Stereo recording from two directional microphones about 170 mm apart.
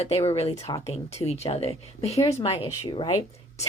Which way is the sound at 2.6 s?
25° left (ahead or behind).